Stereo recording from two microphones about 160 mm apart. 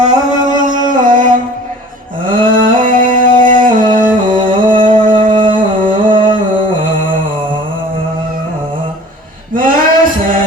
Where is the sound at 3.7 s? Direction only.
55° right (ahead or behind).